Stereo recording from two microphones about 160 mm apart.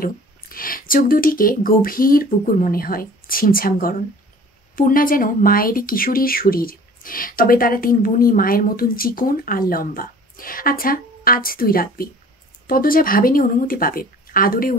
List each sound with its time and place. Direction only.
0.0 s speech: 65° left (ahead or behind)